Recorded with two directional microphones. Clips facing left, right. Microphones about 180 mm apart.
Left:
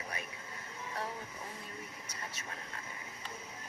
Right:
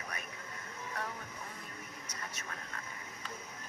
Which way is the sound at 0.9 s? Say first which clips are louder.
Left 2 dB; 30° left (ahead or behind).